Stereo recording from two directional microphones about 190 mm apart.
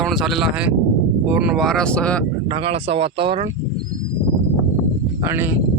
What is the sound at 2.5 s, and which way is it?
Speech, 30° right (ahead or behind).